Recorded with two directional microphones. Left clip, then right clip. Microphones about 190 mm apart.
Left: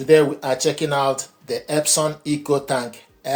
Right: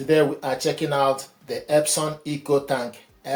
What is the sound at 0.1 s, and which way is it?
Speech, 45° left (ahead or behind).